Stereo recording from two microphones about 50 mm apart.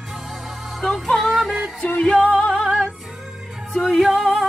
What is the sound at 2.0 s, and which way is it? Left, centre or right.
Music, centre.